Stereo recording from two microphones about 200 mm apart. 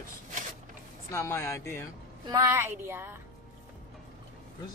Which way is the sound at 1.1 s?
15° left (ahead or behind).